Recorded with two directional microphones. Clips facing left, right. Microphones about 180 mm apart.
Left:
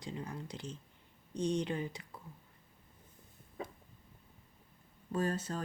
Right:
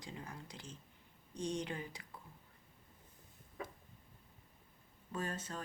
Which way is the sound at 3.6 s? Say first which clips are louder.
Left 3 dB; 25° left (ahead or behind).